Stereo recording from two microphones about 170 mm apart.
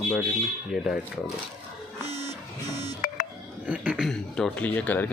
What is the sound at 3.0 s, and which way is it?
Music, 55° left (ahead or behind).